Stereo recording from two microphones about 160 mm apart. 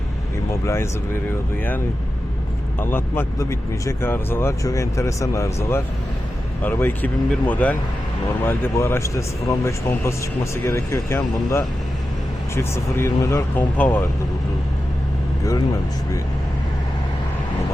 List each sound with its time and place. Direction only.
0.6 s speech: 15° left (ahead or behind)
2.8 s speech: 15° left (ahead or behind)